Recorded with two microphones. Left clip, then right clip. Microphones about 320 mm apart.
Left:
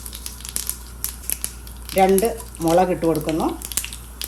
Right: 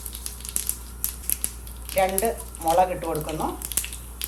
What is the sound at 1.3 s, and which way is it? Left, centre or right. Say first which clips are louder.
Crumpling: left 2 dB; centre.